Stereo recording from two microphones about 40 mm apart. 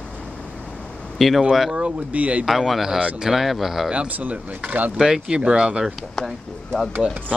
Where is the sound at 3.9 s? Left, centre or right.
Right.